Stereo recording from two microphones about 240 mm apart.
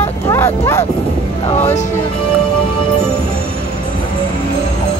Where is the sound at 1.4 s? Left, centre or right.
Left.